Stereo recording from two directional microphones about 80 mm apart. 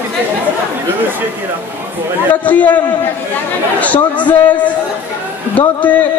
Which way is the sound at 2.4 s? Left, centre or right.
Centre.